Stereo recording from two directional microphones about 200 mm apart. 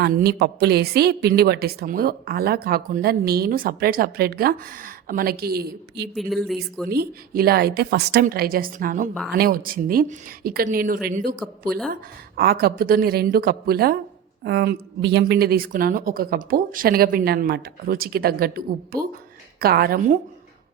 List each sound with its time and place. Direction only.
0.0 s a woman's voice: 50° right (ahead or behind)
6.1 s speech: centre (ahead or behind)
6.9 s a woman's voice: 50° right (ahead or behind)
12.4 s a woman's voice: 50° right (ahead or behind)